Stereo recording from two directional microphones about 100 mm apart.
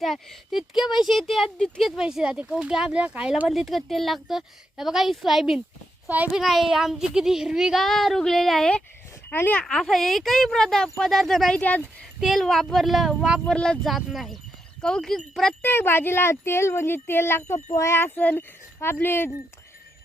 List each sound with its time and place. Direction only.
0.0 s speech: centre (ahead or behind)
2.0 s speech: 5° right (ahead or behind)
6.1 s speech: 15° right (ahead or behind)
6.3 s speech: centre (ahead or behind)
9.3 s speech: 20° left (ahead or behind)
9.6 s speech: 5° left (ahead or behind)
13.5 s speech: 5° left (ahead or behind)
15.6 s speech: 20° left (ahead or behind)